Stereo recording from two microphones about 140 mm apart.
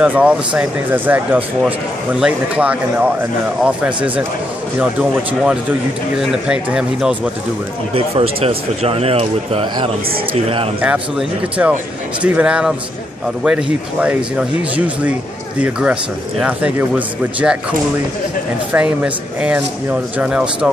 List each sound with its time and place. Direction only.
0.0 s speech: 10° right (ahead or behind)
5.4 s speech: 5° right (ahead or behind)
7.9 s speech: 45° right (ahead or behind)
10.8 s speech: 10° right (ahead or behind)
18.7 s speech: 10° right (ahead or behind)